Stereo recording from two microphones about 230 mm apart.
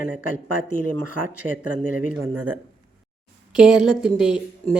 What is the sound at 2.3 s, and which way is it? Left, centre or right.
Speech, right.